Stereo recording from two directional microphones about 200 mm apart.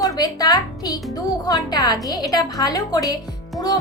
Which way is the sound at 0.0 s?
20° left (ahead or behind).